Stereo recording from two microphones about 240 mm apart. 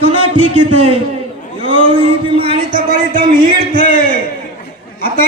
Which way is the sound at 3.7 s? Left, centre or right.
Left.